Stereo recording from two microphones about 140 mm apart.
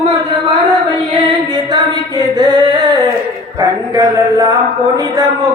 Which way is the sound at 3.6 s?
25° right (ahead or behind).